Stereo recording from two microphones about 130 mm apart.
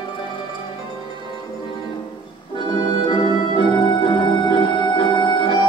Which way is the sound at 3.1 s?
40° left (ahead or behind).